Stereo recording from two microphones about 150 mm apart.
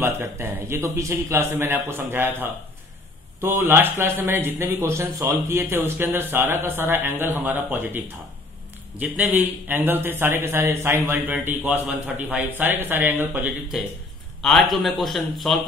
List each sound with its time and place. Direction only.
0.0 s speech: 15° right (ahead or behind)
3.3 s speech: 15° right (ahead or behind)
9.0 s a man's voice: 10° right (ahead or behind)